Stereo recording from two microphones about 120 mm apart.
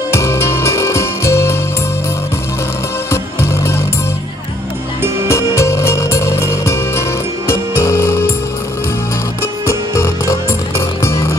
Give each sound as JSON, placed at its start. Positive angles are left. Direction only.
{"t": 0.1, "sound": "music", "side_deg": 20}
{"t": 5.3, "sound": "music", "side_deg": 25}
{"t": 9.7, "sound": "music", "side_deg": 25}